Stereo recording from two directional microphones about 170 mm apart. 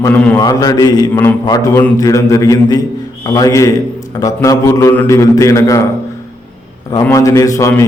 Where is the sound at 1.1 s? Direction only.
10° left (ahead or behind).